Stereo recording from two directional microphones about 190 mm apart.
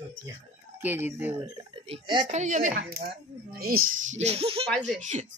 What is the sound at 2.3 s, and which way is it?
Speech, 40° right (ahead or behind).